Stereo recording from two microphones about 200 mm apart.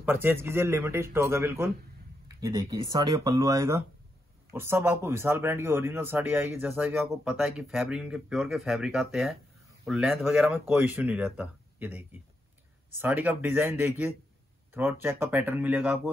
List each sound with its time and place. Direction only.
0.0 s speech: 10° right (ahead or behind)